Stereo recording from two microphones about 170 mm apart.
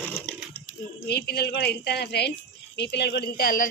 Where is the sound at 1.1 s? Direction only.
70° left (ahead or behind).